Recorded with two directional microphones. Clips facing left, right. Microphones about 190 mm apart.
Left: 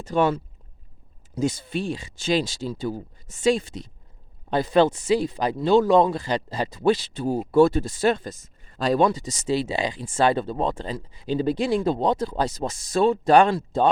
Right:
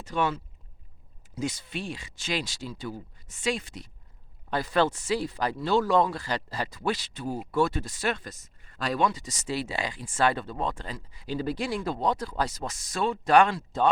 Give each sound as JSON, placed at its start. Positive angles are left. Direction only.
{"t": 0.0, "sound": "speech", "side_deg": 40}
{"t": 1.5, "sound": "speech", "side_deg": 30}